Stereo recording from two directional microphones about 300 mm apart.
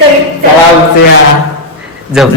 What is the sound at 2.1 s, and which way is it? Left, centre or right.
Speech, centre.